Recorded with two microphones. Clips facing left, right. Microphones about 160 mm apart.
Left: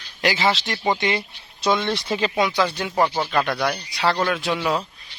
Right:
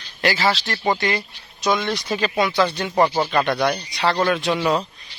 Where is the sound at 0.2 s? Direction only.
15° left (ahead or behind).